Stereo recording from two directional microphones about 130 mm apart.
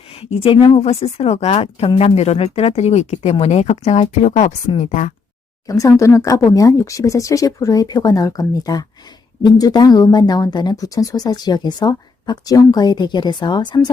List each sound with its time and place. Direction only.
0.1 s a woman's voice: 50° left (ahead or behind); by 5.1 s 70° left (ahead or behind)
5.6 s speech: 25° left (ahead or behind)